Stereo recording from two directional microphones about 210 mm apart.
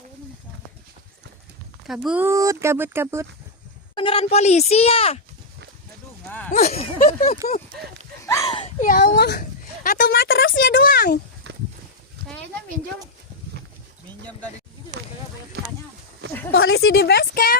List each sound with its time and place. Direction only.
1.9 s speech: 5° right (ahead or behind)
3.9 s speech: 25° left (ahead or behind)
6.5 s speech: 30° left (ahead or behind)
8.4 s a sound: 25° left (ahead or behind)
8.8 s a sound: 45° left (ahead or behind)
11.5 s walk: 55° right (ahead or behind)
16.5 s speech: 75° left (ahead or behind)
16.9 s a woman's voice: 50° left (ahead or behind)